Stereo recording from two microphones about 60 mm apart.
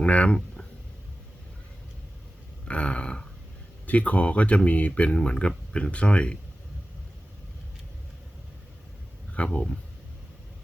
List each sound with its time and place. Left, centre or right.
0.0 s speech: centre
2.6 s a sound: centre
3.8 s speech: left
9.3 s speech: centre